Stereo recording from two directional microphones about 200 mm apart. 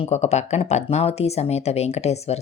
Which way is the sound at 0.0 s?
35° left (ahead or behind).